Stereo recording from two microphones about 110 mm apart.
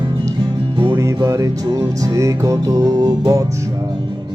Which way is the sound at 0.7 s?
50° right (ahead or behind).